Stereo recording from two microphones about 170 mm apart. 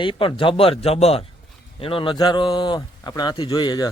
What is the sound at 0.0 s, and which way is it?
Speech, 30° left (ahead or behind).